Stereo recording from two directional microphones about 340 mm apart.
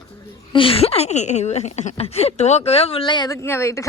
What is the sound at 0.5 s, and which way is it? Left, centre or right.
Speech, centre.